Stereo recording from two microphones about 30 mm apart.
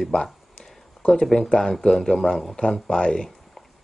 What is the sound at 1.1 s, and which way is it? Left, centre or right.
Speech, centre.